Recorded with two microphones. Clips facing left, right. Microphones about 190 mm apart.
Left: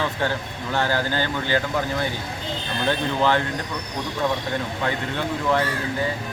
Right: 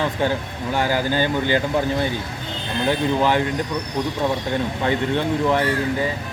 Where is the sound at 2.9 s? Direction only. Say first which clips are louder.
Right 2 dB; 15° right (ahead or behind).